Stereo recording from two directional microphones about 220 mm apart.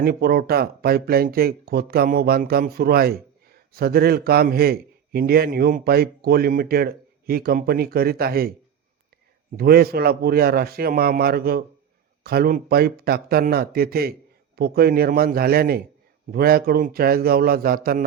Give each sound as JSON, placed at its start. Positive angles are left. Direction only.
{"t": 0.0, "sound": "speech", "side_deg": -45}
{"t": 9.6, "sound": "speech", "side_deg": -45}